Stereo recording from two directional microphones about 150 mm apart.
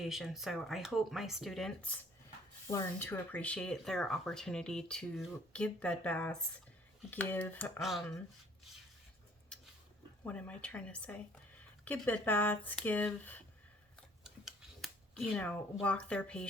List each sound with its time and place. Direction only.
0.0 s speech: centre (ahead or behind)
2.6 s speech: 20° left (ahead or behind)
7.8 s speech: centre (ahead or behind)
9.5 s a sound: 5° left (ahead or behind)
10.2 s speech: 10° left (ahead or behind)
14.3 s a sound: centre (ahead or behind)